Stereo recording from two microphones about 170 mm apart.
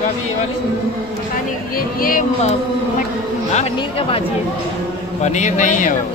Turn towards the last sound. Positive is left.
turn(degrees=50)  # may be behind; listen again after turning